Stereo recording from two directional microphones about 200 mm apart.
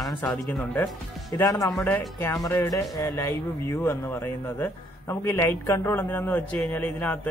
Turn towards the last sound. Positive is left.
turn(degrees=10)  # may be behind; listen again after turning